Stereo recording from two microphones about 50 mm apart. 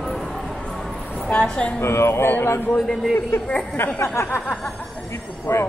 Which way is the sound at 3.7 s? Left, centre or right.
Left.